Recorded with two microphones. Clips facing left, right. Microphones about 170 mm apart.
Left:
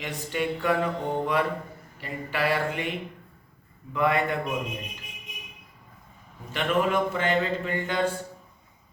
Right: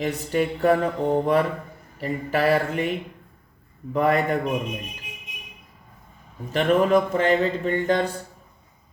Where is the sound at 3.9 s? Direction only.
40° right (ahead or behind).